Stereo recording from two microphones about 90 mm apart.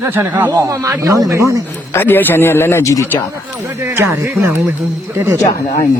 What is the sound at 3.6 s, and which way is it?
Speech, 25° right (ahead or behind).